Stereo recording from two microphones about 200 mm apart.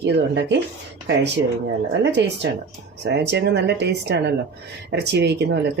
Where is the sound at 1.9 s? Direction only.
60° right (ahead or behind).